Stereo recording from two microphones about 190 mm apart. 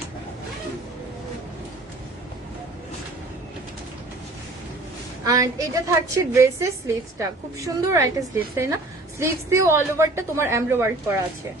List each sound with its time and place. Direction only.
5.2 s a woman's voice: 20° right (ahead or behind)